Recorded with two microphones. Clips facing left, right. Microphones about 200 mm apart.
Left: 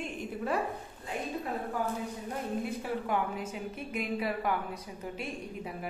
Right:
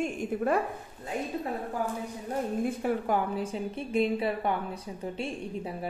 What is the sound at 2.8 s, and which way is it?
A woman's voice, 35° right (ahead or behind).